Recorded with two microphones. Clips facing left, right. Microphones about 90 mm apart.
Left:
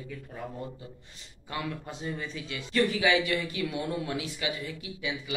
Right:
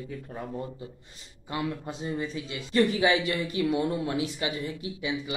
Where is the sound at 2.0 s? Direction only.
25° right (ahead or behind).